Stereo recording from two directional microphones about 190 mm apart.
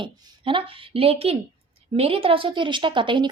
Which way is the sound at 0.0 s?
25° right (ahead or behind).